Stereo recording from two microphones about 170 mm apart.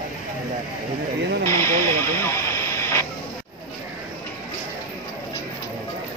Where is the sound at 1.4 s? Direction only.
15° left (ahead or behind).